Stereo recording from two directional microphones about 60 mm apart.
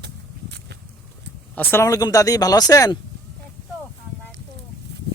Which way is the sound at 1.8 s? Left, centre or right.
Left.